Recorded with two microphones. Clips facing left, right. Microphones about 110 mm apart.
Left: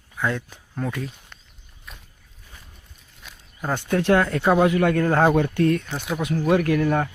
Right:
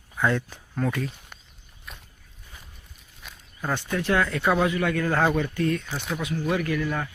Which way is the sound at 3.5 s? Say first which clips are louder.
Left 4 dB; 15° left (ahead or behind).